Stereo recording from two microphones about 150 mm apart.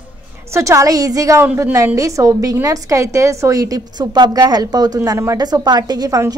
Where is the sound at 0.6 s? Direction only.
20° right (ahead or behind).